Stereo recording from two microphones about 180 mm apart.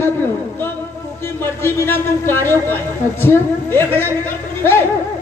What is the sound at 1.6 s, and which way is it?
Speech, 15° left (ahead or behind).